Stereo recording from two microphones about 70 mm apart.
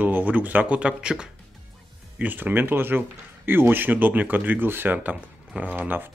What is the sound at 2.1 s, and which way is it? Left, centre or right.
Speech, right.